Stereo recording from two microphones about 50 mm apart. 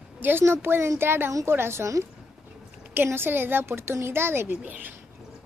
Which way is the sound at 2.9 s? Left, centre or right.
Right.